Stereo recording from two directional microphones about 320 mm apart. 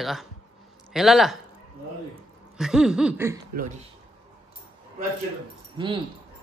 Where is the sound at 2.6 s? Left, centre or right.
Centre.